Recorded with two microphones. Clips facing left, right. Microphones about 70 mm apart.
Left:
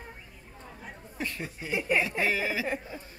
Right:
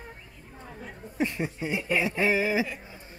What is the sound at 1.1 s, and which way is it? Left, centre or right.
Speech, right.